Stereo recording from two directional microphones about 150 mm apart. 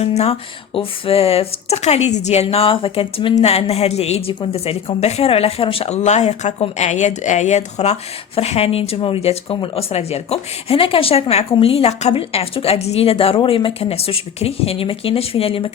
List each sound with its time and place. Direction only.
0.0 s speech: 45° left (ahead or behind)